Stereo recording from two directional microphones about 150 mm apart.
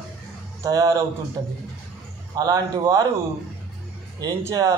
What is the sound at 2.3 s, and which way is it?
Speech, 25° right (ahead or behind).